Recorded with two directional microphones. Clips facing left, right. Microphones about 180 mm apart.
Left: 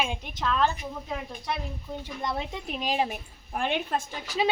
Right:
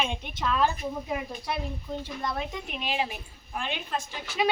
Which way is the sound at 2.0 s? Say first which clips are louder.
Left 3 dB; 25° left (ahead or behind).